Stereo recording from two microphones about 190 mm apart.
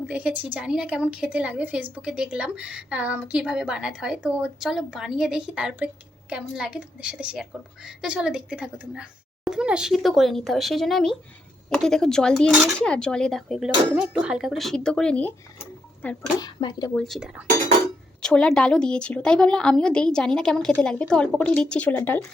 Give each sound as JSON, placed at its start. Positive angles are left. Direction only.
{"t": 0.1, "sound": "a woman's voice", "side_deg": -5}
{"t": 16.4, "sound": "speech", "side_deg": 20}
{"t": 16.9, "sound": "a woman's voice", "side_deg": 0}